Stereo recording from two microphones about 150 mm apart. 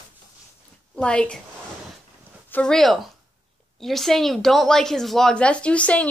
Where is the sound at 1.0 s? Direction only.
5° left (ahead or behind).